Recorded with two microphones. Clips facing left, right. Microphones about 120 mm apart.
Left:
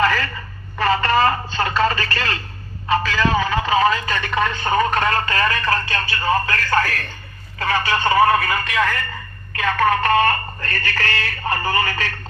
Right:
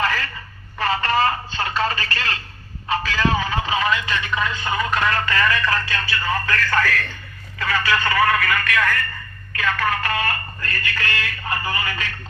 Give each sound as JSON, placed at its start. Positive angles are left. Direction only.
{"t": 0.8, "sound": "telephone", "side_deg": 45}
{"t": 2.9, "sound": "a sound", "side_deg": 50}
{"t": 3.8, "sound": "speech", "side_deg": 35}